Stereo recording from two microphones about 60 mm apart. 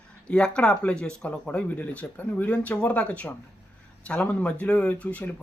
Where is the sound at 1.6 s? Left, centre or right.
Left.